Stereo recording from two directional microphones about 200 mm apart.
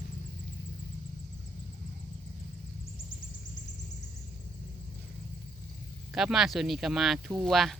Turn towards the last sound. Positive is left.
turn(degrees=0)  # may be behind; listen again after turning